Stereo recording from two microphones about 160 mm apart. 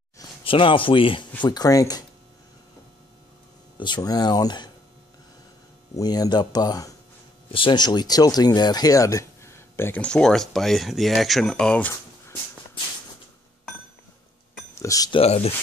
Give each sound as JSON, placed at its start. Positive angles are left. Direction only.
{"t": 0.2, "sound": "speech", "side_deg": 35}
{"t": 3.8, "sound": "speech", "side_deg": 25}
{"t": 5.9, "sound": "speech", "side_deg": 25}
{"t": 14.8, "sound": "speech", "side_deg": 20}
{"t": 15.1, "sound": "speech", "side_deg": 40}